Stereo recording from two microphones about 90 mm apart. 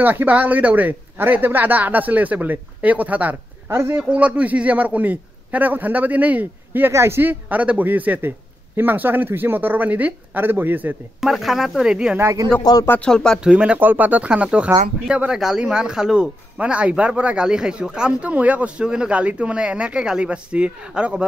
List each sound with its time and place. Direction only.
0.0 s speech: 20° right (ahead or behind)
6.9 s speech: 30° right (ahead or behind)
11.1 s speech: centre (ahead or behind)
12.2 s a man's voice: 35° right (ahead or behind)
12.7 s speech: 50° left (ahead or behind)
13.0 s speech: 10° left (ahead or behind)
13.4 s speech: 10° right (ahead or behind)